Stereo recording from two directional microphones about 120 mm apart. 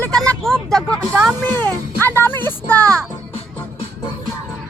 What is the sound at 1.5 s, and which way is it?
Speech, 15° left (ahead or behind).